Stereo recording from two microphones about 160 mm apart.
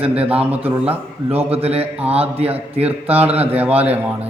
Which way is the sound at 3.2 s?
10° right (ahead or behind).